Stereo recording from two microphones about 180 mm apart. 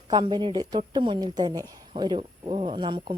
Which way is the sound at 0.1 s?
25° right (ahead or behind).